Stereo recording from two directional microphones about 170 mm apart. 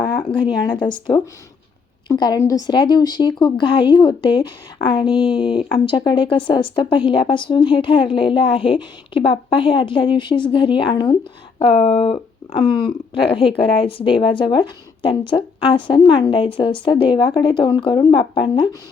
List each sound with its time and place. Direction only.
0.9 s speech: 25° left (ahead or behind)